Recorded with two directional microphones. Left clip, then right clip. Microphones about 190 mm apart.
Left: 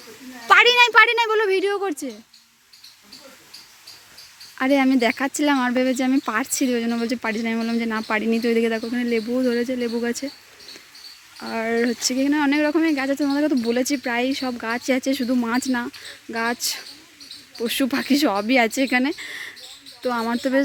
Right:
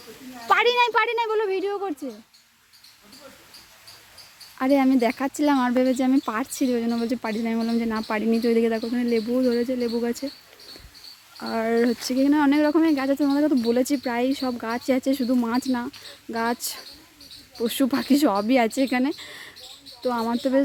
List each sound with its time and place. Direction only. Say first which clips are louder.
0.4 s a woman's voice: left 5 dB; 5° right (ahead or behind)
4.5 s a woman's voice: left 2 dB; 5° right (ahead or behind)
11.3 s a woman's voice: even; 10° right (ahead or behind)